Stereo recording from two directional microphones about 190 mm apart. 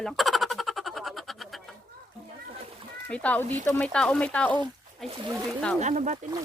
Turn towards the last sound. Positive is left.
turn(degrees=-40)  # may be behind; listen again after turning